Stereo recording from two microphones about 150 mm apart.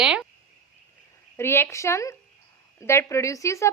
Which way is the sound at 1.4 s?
15° left (ahead or behind).